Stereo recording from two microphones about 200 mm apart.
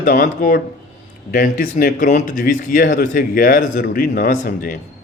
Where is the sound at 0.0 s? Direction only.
45° left (ahead or behind).